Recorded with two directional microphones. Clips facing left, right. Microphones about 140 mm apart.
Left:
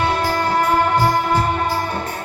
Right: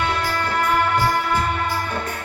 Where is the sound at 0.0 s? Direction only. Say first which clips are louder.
Left 4 dB; 40° left (ahead or behind).